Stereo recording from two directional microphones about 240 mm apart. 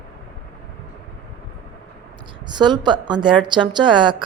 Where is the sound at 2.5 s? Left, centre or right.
Centre.